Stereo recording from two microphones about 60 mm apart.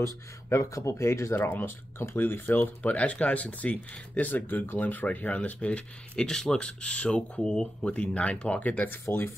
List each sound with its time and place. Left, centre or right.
0.0 s speech: left
1.3 s speech: left